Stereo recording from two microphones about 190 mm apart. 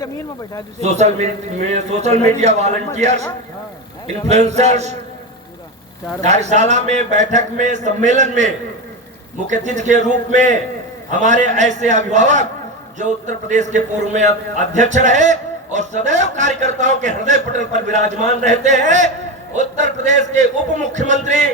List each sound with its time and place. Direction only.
0.8 s a man's voice: 35° right (ahead or behind)
4.3 s a man's voice: 35° right (ahead or behind)
6.2 s a man's voice: 35° right (ahead or behind)